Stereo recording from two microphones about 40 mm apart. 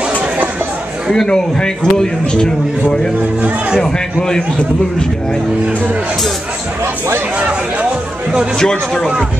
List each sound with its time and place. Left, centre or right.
1.1 s speech: centre
3.8 s speech: centre
8.5 s speech: centre